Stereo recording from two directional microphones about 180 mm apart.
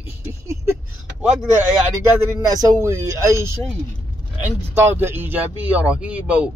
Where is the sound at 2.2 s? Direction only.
20° right (ahead or behind).